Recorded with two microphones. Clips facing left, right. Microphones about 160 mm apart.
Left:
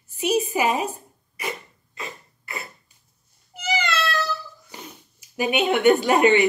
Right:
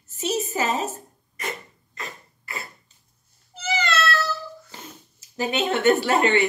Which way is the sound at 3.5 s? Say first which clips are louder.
Even; 15° left (ahead or behind).